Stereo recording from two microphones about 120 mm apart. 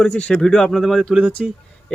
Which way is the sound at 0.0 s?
10° left (ahead or behind).